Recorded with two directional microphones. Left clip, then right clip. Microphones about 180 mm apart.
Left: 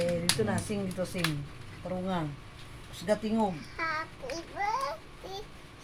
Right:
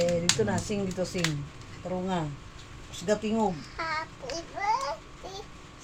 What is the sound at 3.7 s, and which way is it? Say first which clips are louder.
Child singing: right 1 dB; 20° left (ahead or behind).